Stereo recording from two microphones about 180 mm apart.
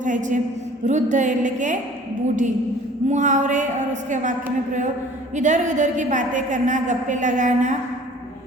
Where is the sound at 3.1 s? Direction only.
45° right (ahead or behind).